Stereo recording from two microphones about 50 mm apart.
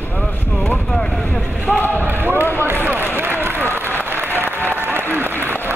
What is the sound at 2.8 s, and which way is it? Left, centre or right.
Run, right.